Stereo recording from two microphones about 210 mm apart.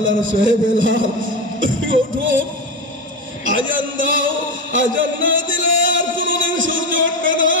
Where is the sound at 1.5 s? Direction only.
65° right (ahead or behind).